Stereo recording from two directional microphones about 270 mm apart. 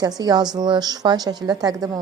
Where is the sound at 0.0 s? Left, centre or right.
Centre.